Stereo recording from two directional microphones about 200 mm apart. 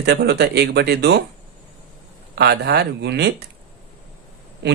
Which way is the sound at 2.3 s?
55° right (ahead or behind).